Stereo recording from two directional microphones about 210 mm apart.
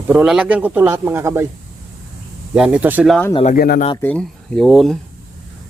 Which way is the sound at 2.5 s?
5° right (ahead or behind).